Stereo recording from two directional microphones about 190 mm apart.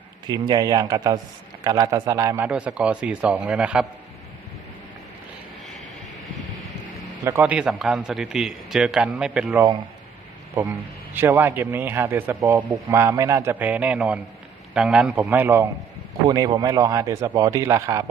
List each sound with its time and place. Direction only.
0.3 s a man's voice: 20° right (ahead or behind)
7.3 s a man's voice: 10° right (ahead or behind)